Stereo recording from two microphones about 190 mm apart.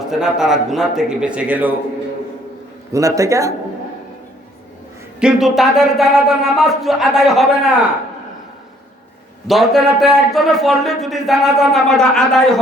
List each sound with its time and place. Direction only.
0.1 s a man's voice: 5° right (ahead or behind)
2.9 s a man's voice: 15° right (ahead or behind)
5.2 s a man's voice: centre (ahead or behind)
9.5 s a man's voice: centre (ahead or behind)